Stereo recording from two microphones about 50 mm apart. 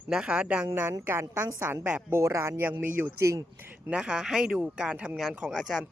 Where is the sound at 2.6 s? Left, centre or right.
Right.